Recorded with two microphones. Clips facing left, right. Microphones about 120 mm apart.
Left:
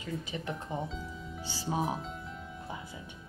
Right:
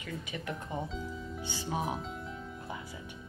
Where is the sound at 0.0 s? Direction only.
30° left (ahead or behind).